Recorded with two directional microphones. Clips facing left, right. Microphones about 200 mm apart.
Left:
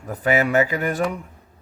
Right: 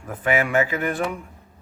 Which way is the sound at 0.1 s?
40° left (ahead or behind).